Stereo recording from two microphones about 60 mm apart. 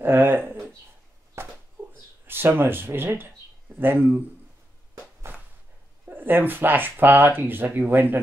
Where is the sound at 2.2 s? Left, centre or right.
Right.